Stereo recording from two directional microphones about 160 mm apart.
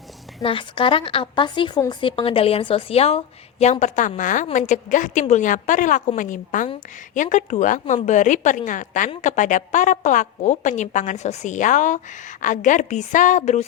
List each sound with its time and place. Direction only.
0.4 s a woman's voice: 35° left (ahead or behind)